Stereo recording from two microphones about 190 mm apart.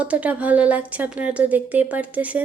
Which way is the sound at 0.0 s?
5° right (ahead or behind).